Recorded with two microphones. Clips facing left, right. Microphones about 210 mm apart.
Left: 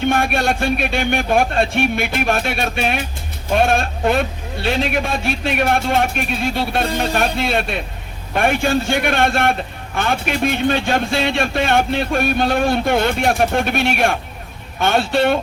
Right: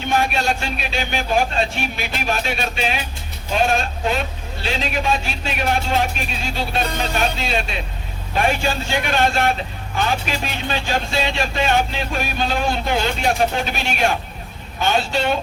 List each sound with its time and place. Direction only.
0.0 s a man's voice: 55° left (ahead or behind)